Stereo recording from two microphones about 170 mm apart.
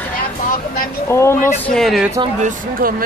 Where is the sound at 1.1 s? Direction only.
15° left (ahead or behind).